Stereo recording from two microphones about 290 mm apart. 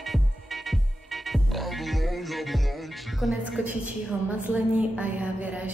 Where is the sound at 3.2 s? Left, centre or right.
Centre.